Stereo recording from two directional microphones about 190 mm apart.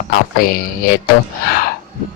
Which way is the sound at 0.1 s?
50° left (ahead or behind).